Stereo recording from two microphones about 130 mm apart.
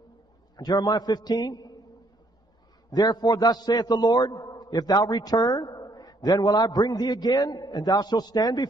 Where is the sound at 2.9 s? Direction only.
30° left (ahead or behind).